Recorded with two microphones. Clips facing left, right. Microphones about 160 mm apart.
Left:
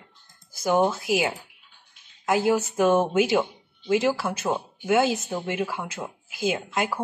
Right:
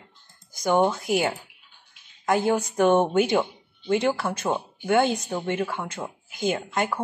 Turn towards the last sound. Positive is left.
turn(degrees=5)  # may be behind; listen again after turning